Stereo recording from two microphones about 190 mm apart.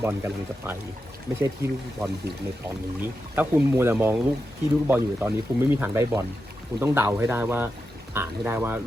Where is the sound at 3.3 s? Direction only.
10° right (ahead or behind).